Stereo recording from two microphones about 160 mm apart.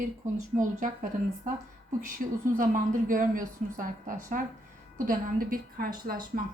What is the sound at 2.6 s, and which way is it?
Speech, 60° right (ahead or behind).